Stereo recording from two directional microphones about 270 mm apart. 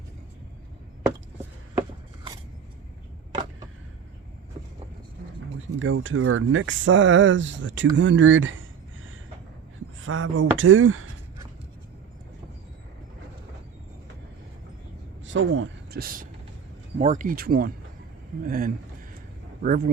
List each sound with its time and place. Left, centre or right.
5.8 s speech: right
10.0 s speech: right
15.2 s speech: right